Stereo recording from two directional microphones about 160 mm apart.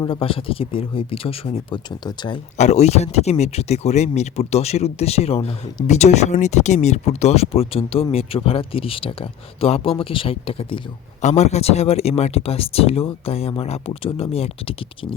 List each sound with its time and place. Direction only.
0.0 s speech: 35° left (ahead or behind)
2.6 s speech: 45° left (ahead or behind)